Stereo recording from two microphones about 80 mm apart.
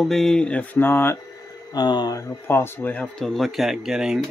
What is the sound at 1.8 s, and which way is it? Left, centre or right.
Speech, left.